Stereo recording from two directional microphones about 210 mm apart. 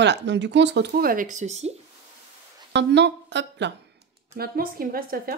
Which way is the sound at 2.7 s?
55° right (ahead or behind).